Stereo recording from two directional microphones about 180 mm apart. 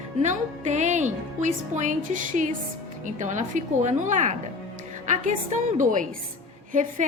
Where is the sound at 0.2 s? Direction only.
40° right (ahead or behind).